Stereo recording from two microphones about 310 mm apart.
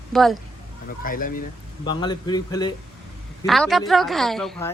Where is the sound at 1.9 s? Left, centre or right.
Centre.